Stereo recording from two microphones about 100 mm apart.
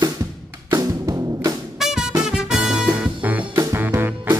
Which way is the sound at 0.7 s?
35° right (ahead or behind).